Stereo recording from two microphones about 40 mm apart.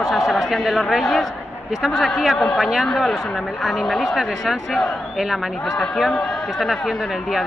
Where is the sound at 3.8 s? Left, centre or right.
Centre.